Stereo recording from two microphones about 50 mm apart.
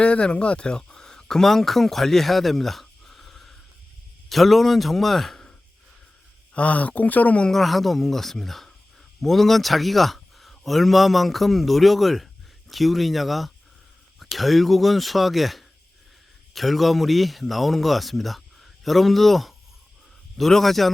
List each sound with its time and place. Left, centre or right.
0.0 s speech: left
6.5 s speech: left
7.5 s speech: centre